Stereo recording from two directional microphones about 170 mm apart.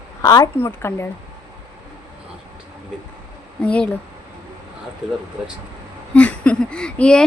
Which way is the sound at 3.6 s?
10° left (ahead or behind).